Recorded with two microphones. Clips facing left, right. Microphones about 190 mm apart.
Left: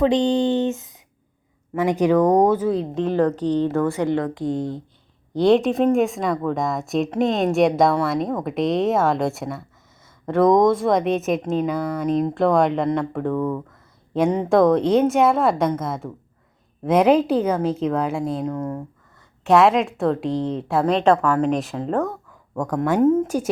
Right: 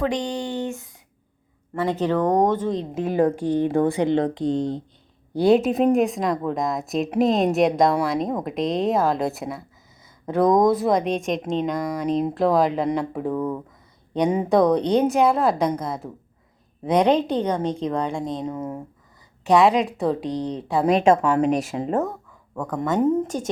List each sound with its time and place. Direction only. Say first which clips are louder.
0.0 s speech: left 7 dB; 25° left (ahead or behind); by 2.8 s 10° left (ahead or behind)
2.9 s speech: left 1 dB; 10° right (ahead or behind)
5.3 s speech: left 1 dB; 5° right (ahead or behind)
21.2 s speech: even; 20° right (ahead or behind)
21.4 s speech: even; 10° right (ahead or behind)
22.5 s speech: left 3 dB; 10° left (ahead or behind)